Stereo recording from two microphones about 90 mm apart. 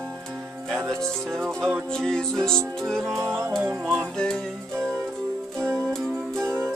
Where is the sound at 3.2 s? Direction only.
30° right (ahead or behind).